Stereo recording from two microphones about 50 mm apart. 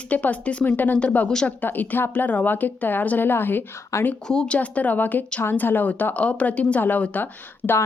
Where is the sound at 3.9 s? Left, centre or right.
Left.